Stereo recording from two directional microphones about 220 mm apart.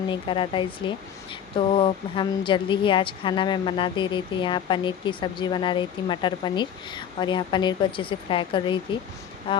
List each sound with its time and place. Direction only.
0.1 s speech: 25° left (ahead or behind)